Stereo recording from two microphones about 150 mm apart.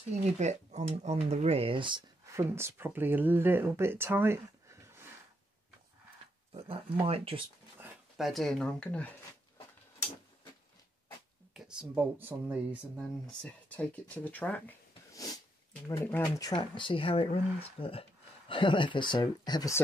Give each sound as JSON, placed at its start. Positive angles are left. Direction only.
{"t": 0.4, "sound": "speech", "side_deg": -50}
{"t": 2.3, "sound": "speech", "side_deg": -15}
{"t": 6.5, "sound": "speech", "side_deg": -40}
{"t": 8.2, "sound": "speech", "side_deg": 0}
{"t": 11.5, "sound": "speech", "side_deg": -5}
{"t": 12.9, "sound": "speech", "side_deg": 5}
{"t": 15.1, "sound": "speech", "side_deg": 25}
{"t": 16.0, "sound": "speech", "side_deg": 10}
{"t": 16.3, "sound": "speech", "side_deg": 30}